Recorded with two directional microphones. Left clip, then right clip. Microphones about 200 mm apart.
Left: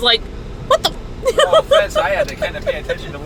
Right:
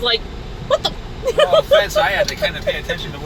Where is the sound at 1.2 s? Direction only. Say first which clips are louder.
Left 1 dB; 10° left (ahead or behind).